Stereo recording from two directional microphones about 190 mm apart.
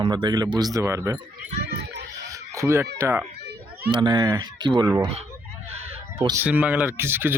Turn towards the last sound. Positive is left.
turn(degrees=-10)  # may be behind; listen again after turning